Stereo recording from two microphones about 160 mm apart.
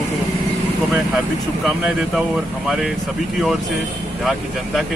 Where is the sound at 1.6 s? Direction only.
Centre (ahead or behind).